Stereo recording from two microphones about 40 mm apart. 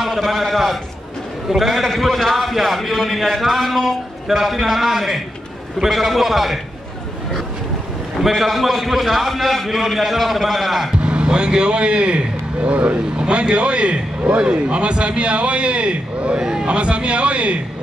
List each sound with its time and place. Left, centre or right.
0.0 s a man's voice: centre
8.2 s a man's voice: centre
11.0 s a man's voice: right